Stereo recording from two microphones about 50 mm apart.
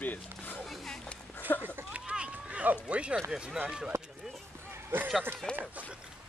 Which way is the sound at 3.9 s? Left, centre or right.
Right.